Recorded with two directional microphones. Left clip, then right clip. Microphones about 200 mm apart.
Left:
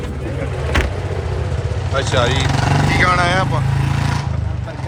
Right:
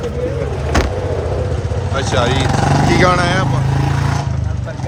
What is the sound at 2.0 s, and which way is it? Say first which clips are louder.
Speech: right 1 dB; 15° right (ahead or behind).